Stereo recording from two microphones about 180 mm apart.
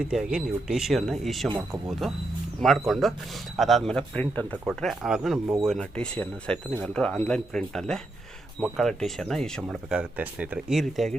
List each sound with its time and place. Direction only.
0.0 s speech: 5° right (ahead or behind)
1.5 s speech: 25° right (ahead or behind)
1.9 s speech: centre (ahead or behind)